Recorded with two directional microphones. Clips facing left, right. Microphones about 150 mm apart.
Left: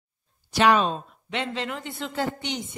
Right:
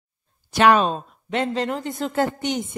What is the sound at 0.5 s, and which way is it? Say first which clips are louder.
Speech: right 3 dB; 50° right (ahead or behind).